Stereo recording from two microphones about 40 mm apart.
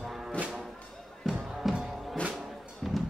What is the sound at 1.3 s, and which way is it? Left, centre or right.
Music, centre.